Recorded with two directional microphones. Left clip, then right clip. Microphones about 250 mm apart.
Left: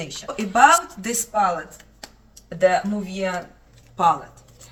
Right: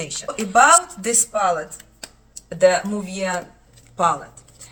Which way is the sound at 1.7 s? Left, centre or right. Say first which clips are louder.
Right 3 dB; centre.